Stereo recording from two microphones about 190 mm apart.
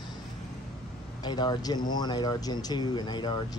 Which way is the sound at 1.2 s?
20° left (ahead or behind).